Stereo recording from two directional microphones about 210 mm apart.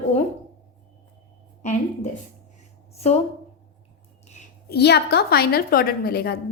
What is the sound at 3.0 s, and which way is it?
Speech, 30° left (ahead or behind).